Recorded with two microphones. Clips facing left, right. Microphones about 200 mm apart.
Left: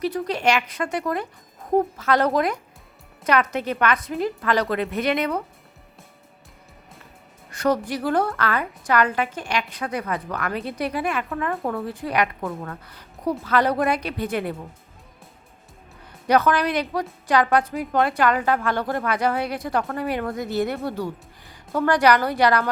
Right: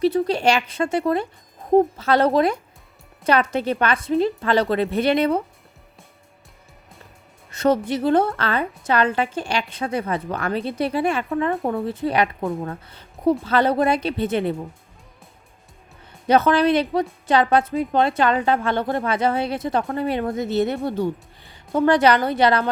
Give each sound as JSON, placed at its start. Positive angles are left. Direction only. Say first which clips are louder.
{"t": 0.0, "sound": "a woman's voice", "louder": "right 4 dB", "side_deg": -30}
{"t": 7.5, "sound": "a woman's voice", "louder": "right 3 dB", "side_deg": -25}
{"t": 16.2, "sound": "a woman's voice", "louder": "right 3 dB", "side_deg": -25}